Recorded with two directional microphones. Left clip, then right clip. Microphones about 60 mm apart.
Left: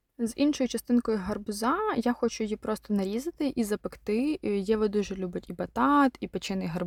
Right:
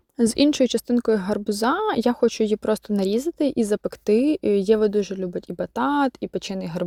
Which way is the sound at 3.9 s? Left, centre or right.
Right.